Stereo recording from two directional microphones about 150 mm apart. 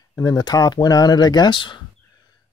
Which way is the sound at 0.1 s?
20° left (ahead or behind).